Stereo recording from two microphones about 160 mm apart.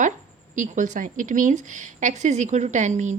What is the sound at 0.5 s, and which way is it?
Speech, 50° right (ahead or behind).